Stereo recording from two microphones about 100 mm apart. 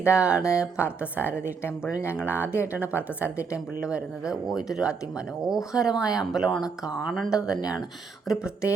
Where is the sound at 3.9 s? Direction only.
5° right (ahead or behind).